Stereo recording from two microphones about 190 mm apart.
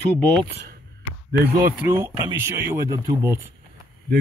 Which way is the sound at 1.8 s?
10° right (ahead or behind).